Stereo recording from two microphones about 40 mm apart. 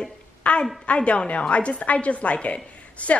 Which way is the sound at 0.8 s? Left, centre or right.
Left.